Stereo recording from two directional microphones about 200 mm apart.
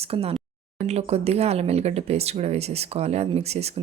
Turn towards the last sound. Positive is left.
turn(degrees=-30)  # may be behind; listen again after turning